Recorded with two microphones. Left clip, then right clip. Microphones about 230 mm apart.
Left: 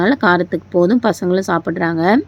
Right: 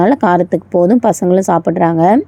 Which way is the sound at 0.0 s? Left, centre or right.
Centre.